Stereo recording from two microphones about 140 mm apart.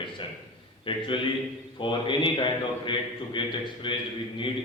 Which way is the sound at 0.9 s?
35° left (ahead or behind).